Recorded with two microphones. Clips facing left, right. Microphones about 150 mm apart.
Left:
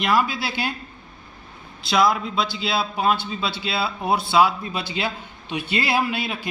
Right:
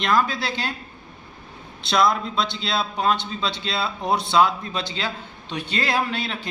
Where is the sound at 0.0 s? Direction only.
10° left (ahead or behind).